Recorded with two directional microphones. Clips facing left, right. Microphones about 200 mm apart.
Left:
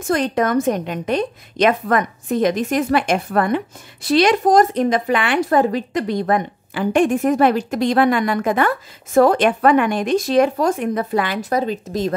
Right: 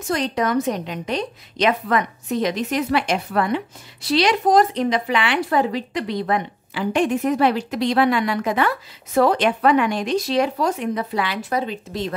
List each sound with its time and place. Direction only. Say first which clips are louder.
0.0 s a woman's voice: left 4 dB; 50° left (ahead or behind)